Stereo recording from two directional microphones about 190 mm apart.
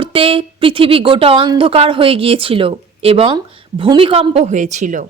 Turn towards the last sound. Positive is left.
turn(degrees=-40)  # may be behind; listen again after turning